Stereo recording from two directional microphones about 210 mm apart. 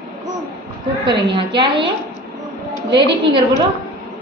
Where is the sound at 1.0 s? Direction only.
20° right (ahead or behind).